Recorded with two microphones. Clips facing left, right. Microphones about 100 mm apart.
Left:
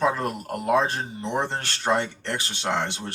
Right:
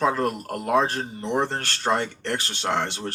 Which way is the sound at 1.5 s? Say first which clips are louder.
Even; 50° right (ahead or behind).